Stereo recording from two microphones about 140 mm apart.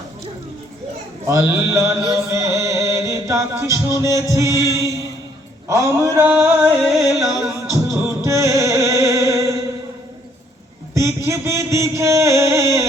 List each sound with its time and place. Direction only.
1.3 s male singing: 20° right (ahead or behind)
2.1 s music: 20° right (ahead or behind)
4.3 s male singing: 20° right (ahead or behind)
4.6 s mantra: 25° left (ahead or behind)
5.6 s male singing: 20° right (ahead or behind)
6.8 s music: centre (ahead or behind)
7.4 s music: 20° right (ahead or behind)
10.9 s a sound: 20° right (ahead or behind)